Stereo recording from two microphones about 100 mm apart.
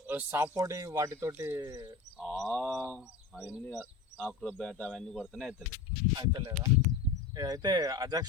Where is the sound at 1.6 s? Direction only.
40° right (ahead or behind).